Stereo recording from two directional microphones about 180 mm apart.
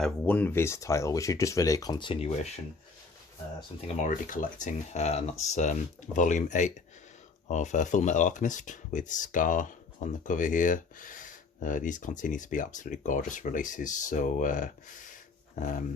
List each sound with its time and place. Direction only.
0.0 s speech: 10° left (ahead or behind); by 2.3 s 25° left (ahead or behind)
3.8 s speech: 45° left (ahead or behind)